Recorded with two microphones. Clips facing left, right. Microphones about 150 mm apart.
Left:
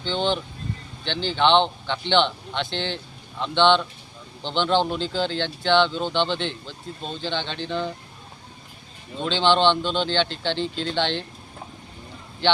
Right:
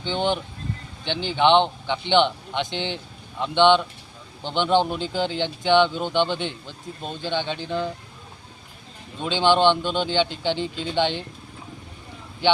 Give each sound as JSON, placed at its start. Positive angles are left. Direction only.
{"t": 0.0, "sound": "speech", "side_deg": -15}
{"t": 9.2, "sound": "speech", "side_deg": -10}